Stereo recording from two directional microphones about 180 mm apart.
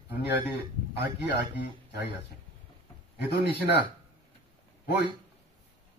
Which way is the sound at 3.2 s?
65° left (ahead or behind).